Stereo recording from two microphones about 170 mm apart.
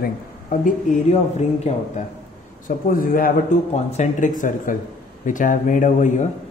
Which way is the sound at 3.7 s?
40° left (ahead or behind).